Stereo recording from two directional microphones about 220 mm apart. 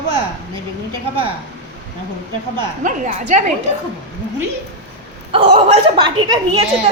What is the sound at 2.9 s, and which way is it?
Speech, 35° right (ahead or behind).